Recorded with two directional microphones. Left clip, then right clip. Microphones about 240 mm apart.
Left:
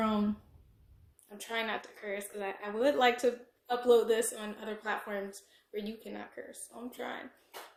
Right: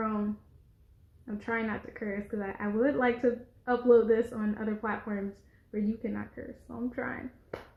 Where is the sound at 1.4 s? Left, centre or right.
Left.